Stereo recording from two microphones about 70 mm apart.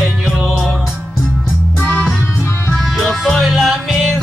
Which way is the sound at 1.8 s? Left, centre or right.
Left.